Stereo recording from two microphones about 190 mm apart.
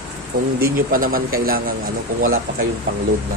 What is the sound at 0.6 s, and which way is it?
Speech, 50° right (ahead or behind).